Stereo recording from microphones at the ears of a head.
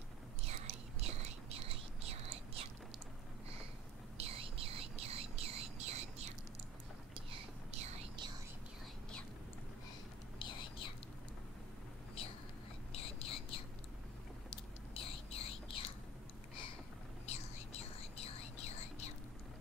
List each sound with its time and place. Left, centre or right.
0.5 s whispering: right
4.2 s whispering: right
7.3 s whispering: right
10.4 s whispering: left
12.9 s a sound: left
14.5 s whispering: left
17.3 s whispering: left